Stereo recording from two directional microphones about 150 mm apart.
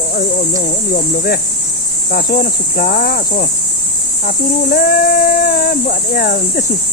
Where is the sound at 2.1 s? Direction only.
80° left.